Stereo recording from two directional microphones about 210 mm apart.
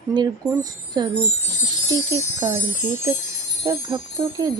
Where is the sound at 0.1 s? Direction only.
20° right (ahead or behind).